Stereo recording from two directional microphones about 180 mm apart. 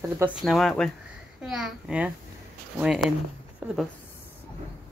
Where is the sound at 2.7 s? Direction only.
5° right (ahead or behind).